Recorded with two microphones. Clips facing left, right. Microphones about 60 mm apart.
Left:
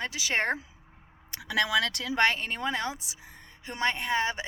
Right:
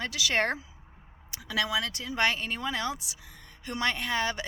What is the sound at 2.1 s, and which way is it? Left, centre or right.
A woman's voice, left.